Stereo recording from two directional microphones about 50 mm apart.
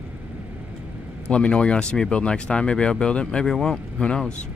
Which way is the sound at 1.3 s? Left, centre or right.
Left.